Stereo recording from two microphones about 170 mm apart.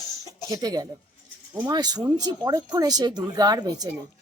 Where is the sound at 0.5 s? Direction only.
20° right (ahead or behind).